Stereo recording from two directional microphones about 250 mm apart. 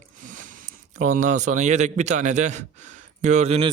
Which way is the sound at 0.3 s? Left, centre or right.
Right.